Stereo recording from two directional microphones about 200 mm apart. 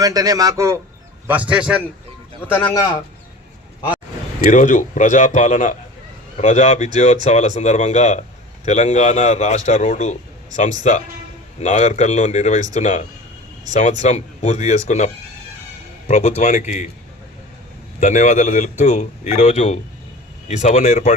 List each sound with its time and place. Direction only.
0.0 s a man's voice: 20° right (ahead or behind)
2.5 s a man's voice: 10° left (ahead or behind)
4.5 s a man's voice: 40° left (ahead or behind)
14.0 s a man's voice: 35° left (ahead or behind)
18.0 s a man's voice: 40° left (ahead or behind)